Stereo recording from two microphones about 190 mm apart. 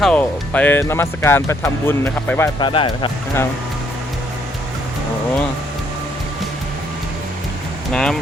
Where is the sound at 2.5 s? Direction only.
25° left (ahead or behind).